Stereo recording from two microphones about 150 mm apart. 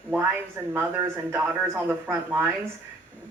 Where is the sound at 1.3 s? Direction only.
20° right (ahead or behind).